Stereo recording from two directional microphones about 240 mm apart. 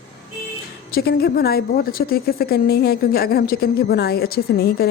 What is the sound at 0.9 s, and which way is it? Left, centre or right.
A woman's voice, left.